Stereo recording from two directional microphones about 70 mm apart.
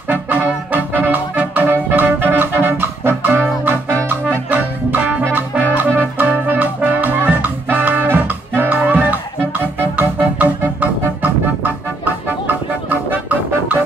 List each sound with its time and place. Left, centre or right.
0.1 s brass instrument: right
2.6 s music: right
4.5 s music: right
12.9 s music: right